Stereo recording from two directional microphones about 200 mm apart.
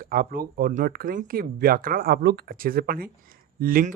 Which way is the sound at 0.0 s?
45° right (ahead or behind).